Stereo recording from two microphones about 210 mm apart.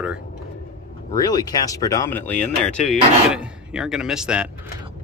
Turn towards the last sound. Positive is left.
turn(degrees=-5)  # may be behind; listen again after turning